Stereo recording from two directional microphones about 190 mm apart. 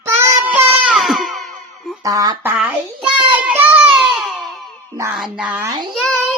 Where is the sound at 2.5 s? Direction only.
5° right (ahead or behind).